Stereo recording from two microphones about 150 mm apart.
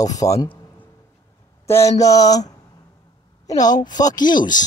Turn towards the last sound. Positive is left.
turn(degrees=30)  # may be behind; listen again after turning